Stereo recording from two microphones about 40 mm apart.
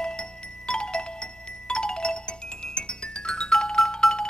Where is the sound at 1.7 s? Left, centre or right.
Left.